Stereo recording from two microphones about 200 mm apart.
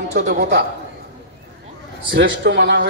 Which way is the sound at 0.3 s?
55° right (ahead or behind).